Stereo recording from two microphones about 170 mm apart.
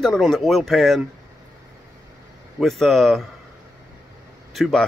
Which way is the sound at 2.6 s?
Centre (ahead or behind).